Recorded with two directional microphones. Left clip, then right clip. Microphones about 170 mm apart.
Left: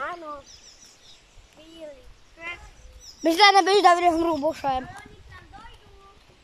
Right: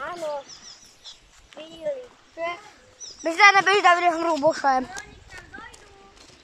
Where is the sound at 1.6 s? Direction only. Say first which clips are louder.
Right 10 dB; 40° right (ahead or behind).